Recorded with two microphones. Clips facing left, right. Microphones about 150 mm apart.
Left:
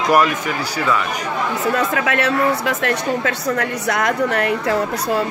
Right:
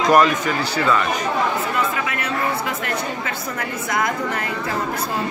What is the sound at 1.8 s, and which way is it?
Speech, 90° left.